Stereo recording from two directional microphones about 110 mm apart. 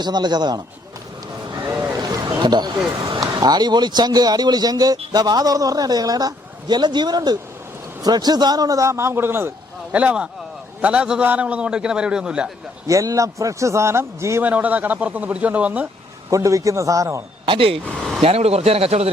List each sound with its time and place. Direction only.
0.0 s speech: 40° right (ahead or behind)
2.0 s a man's voice: 35° right (ahead or behind); by 12.5 s 5° right (ahead or behind)
12.9 s a man's voice: 30° right (ahead or behind); by 15.9 s 15° right (ahead or behind)
16.3 s a man's voice: 30° right (ahead or behind)
17.4 s speech: 55° right (ahead or behind)
18.2 s speech: 65° right (ahead or behind)